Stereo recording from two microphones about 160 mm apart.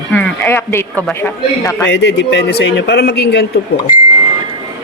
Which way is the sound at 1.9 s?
90° left.